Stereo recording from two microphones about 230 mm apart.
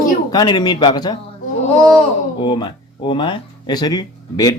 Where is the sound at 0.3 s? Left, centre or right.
Centre.